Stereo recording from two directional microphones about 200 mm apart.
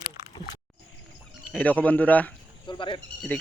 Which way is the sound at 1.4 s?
5° left (ahead or behind).